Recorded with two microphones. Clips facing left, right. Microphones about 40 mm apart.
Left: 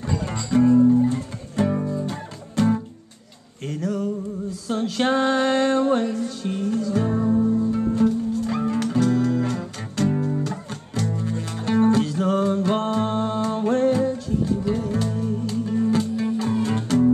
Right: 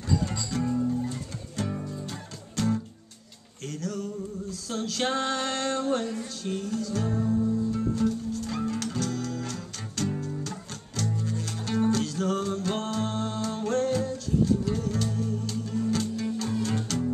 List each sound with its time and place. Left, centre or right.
0.0 s music: left
0.7 s music: left
7.3 s music: left
7.7 s music: left